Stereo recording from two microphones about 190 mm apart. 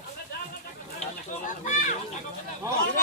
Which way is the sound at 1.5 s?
40° left (ahead or behind).